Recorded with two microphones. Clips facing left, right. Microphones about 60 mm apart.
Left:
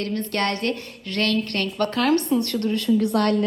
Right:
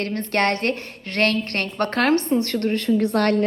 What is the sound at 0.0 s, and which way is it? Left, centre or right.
A woman's voice, right.